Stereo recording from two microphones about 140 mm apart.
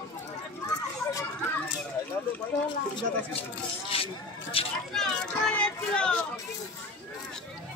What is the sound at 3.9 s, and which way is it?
Speech, 40° left (ahead or behind).